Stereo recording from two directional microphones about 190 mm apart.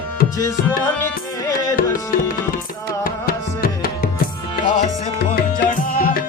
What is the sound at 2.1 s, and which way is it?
Tabla, 50° left (ahead or behind).